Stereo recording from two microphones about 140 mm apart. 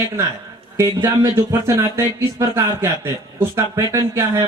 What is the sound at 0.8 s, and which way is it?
Speech, 20° right (ahead or behind).